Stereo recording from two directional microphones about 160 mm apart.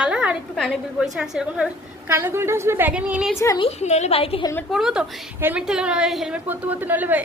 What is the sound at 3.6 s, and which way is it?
Speech, 40° left (ahead or behind).